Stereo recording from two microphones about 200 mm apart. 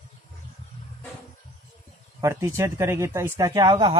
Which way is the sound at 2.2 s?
15° right (ahead or behind).